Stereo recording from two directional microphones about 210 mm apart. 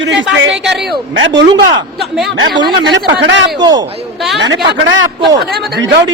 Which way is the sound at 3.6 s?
20° right (ahead or behind).